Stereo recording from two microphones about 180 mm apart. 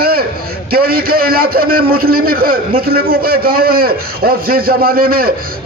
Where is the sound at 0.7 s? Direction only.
55° right (ahead or behind).